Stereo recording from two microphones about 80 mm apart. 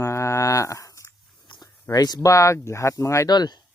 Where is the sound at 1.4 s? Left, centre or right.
Left.